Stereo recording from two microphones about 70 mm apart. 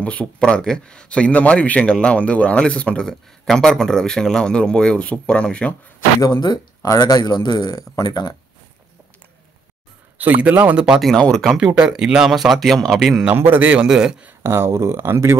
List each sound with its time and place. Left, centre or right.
0.0 s a man's voice: centre
6.2 s speech: left
10.1 s speech: right
11.0 s a man's voice: centre
11.4 s a man's voice: centre
13.3 s speech: right
13.8 s speech: centre
14.4 s speech: right